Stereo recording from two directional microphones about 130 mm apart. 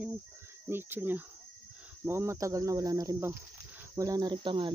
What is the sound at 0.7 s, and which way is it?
Speech, 15° right (ahead or behind).